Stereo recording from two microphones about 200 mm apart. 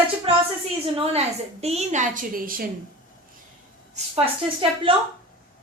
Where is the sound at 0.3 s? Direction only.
30° right (ahead or behind).